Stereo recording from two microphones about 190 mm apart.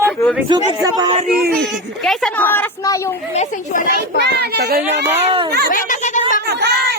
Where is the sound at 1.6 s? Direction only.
Centre (ahead or behind).